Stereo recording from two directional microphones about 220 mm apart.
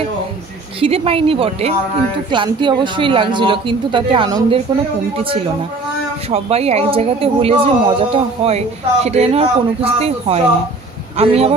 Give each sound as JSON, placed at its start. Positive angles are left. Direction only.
{"t": 0.7, "sound": "speech", "side_deg": -25}